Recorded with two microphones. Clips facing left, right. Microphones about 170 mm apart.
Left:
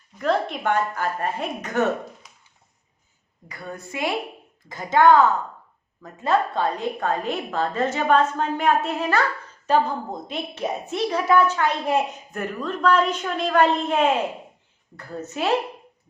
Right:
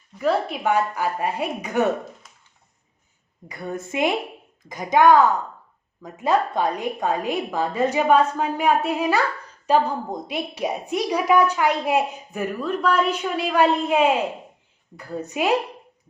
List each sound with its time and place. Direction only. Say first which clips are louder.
0.2 s a woman's voice: right 1 dB; 5° right (ahead or behind)
3.5 s a woman's voice: right 5 dB; 20° right (ahead or behind)